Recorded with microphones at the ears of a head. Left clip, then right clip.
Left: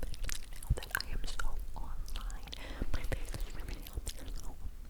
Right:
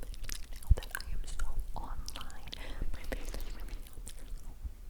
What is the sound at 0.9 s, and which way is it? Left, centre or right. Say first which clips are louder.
Chewing: left 5 dB; left.